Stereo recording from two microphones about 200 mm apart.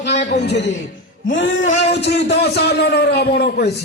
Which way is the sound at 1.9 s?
60° left (ahead or behind).